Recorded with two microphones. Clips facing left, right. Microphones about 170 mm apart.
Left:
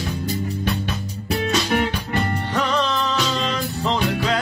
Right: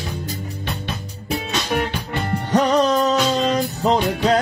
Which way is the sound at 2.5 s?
40° right (ahead or behind).